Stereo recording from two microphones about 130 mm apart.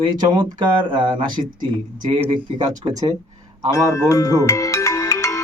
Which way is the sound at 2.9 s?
30° right (ahead or behind).